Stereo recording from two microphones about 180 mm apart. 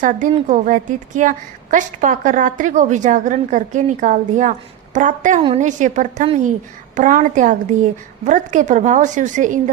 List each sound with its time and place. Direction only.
0.0 s a woman's voice: 45° right (ahead or behind)